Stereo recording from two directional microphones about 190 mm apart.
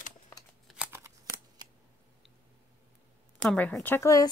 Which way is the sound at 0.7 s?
10° right (ahead or behind).